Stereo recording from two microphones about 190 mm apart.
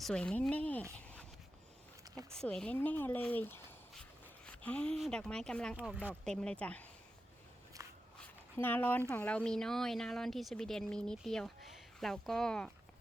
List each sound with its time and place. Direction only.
0.0 s speech: 5° left (ahead or behind)
2.3 s speech: 5° left (ahead or behind)
7.8 s walk: 15° right (ahead or behind)
8.5 s speech: 10° left (ahead or behind)